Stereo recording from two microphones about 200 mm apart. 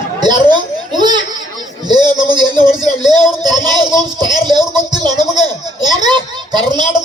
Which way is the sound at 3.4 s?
20° right (ahead or behind).